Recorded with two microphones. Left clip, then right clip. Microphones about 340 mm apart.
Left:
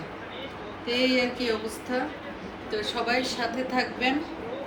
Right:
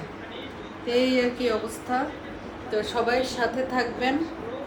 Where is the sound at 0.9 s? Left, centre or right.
Centre.